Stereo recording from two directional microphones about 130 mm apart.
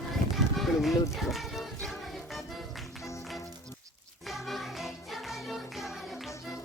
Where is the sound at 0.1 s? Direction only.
Centre (ahead or behind).